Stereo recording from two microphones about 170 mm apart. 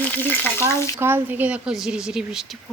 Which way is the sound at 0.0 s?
10° left (ahead or behind).